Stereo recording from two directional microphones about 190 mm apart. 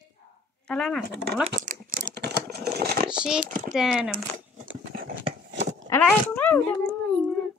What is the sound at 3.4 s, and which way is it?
Speech, 45° right (ahead or behind).